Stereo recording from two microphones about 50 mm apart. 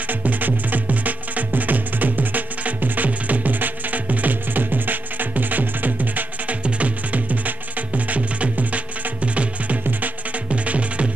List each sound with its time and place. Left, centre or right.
0.0 s music: right